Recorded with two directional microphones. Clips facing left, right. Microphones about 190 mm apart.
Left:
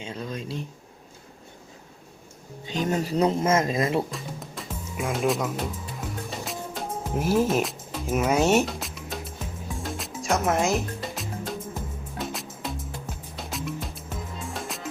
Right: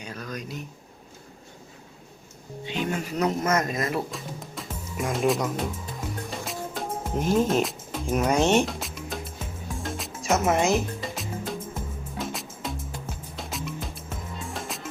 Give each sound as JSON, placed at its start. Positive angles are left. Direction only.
{"t": 0.0, "sound": "speech", "side_deg": 25}
{"t": 2.6, "sound": "speech", "side_deg": 40}
{"t": 4.1, "sound": "music", "side_deg": 0}